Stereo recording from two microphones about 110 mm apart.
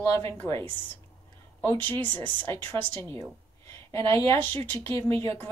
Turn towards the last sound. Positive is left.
turn(degrees=25)  # may be behind; listen again after turning